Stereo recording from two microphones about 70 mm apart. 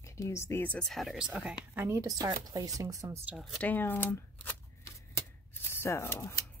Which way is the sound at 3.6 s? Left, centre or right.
Left.